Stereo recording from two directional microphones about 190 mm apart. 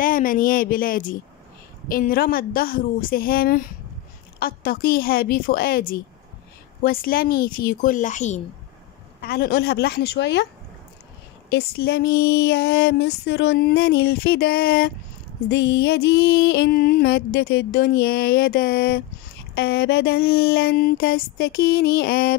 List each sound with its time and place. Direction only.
0.0 s a woman's voice: 45° left (ahead or behind)
9.2 s music: 55° left (ahead or behind)
15.4 s music: 65° left (ahead or behind)